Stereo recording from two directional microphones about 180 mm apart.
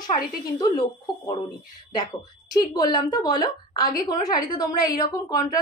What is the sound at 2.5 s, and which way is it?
A woman's voice, 20° left (ahead or behind).